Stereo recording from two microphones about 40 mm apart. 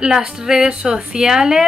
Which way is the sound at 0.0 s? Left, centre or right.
Centre.